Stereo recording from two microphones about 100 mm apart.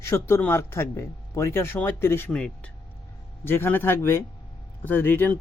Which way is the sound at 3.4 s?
20° left (ahead or behind).